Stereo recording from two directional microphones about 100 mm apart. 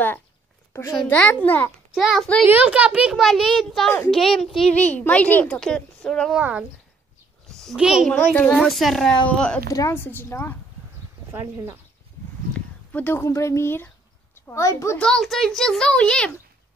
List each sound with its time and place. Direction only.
1.0 s a woman's voice: 15° left (ahead or behind)
2.0 s a child's voice: 5° left (ahead or behind)
2.4 s a child's voice: 15° right (ahead or behind); by 4.5 s 5° left (ahead or behind)
4.8 s a woman's voice: 15° left (ahead or behind)
6.3 s a woman's voice: 10° right (ahead or behind)
7.4 s a sound: 5° left (ahead or behind)
7.7 s a woman's voice: 5° right (ahead or behind)
8.3 s a woman's voice: 15° left (ahead or behind)
8.6 s a child's voice: centre (ahead or behind)
9.7 s a woman's voice: 35° left (ahead or behind)
9.9 s speech: 20° left (ahead or behind)
12.5 s a sound: 15° left (ahead or behind)
13.2 s speech: 30° left (ahead or behind)
15.0 s a child's voice: 5° left (ahead or behind)